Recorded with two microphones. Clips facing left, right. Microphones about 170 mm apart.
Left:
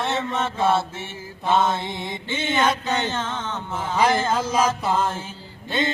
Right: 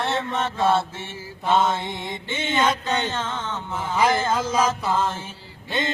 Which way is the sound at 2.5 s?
20° left (ahead or behind).